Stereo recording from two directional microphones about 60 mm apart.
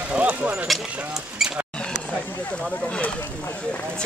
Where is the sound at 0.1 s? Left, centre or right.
Right.